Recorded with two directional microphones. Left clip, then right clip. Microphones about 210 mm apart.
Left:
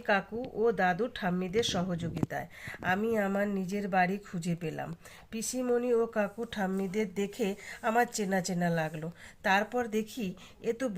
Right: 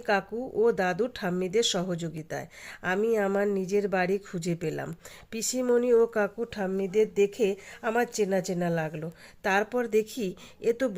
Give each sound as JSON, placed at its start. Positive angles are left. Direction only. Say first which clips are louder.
{"t": 0.0, "sound": "speech", "louder": "right 2 dB", "side_deg": -45}